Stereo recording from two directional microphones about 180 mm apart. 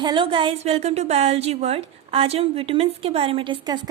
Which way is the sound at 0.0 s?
25° right (ahead or behind).